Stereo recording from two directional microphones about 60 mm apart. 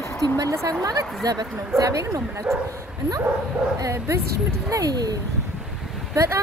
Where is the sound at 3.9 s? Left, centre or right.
Right.